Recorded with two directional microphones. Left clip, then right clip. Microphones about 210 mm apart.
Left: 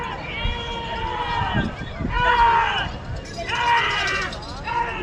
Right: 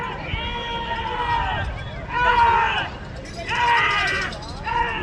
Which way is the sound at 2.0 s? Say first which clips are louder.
Even; centre (ahead or behind).